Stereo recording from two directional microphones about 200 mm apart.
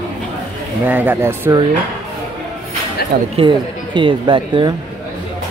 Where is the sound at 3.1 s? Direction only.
50° right (ahead or behind).